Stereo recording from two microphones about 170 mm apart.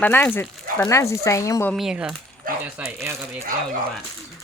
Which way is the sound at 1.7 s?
Centre (ahead or behind).